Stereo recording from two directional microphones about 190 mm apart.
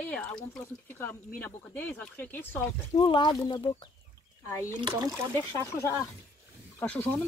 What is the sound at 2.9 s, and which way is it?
Speech, 25° left (ahead or behind).